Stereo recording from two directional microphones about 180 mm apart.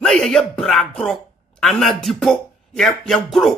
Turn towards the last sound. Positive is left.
turn(degrees=0)  # may be behind; listen again after turning